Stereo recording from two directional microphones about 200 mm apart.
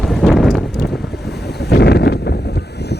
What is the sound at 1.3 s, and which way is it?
Boat, 55° left (ahead or behind).